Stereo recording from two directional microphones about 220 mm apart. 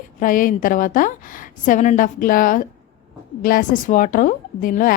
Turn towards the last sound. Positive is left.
turn(degrees=40)  # may be behind; listen again after turning